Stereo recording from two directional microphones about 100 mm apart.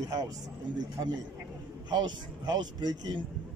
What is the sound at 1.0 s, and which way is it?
Speech, 45° right (ahead or behind).